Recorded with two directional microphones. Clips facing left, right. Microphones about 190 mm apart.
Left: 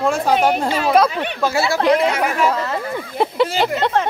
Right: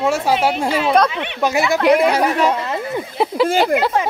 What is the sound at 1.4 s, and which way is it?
Speech, 20° right (ahead or behind).